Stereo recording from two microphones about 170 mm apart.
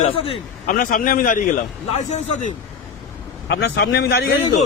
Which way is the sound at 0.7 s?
55° left (ahead or behind).